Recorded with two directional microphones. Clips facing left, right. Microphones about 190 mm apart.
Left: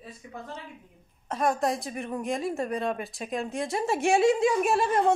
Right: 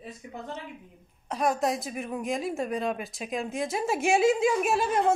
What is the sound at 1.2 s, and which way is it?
A woman's voice, centre (ahead or behind).